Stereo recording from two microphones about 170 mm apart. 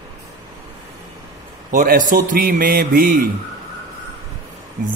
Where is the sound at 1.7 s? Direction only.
50° right (ahead or behind).